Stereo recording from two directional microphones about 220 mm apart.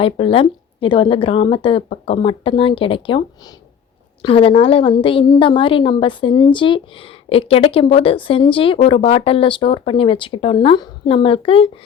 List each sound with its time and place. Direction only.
0.0 s a woman's voice: 25° left (ahead or behind)